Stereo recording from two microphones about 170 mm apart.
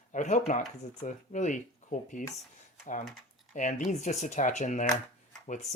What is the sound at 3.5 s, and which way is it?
Speech, 50° left (ahead or behind).